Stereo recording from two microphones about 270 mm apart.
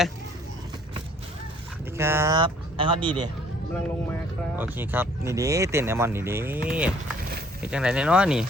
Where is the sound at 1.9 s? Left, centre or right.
Centre.